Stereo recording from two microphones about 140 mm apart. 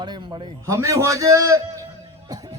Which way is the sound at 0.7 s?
20° right (ahead or behind).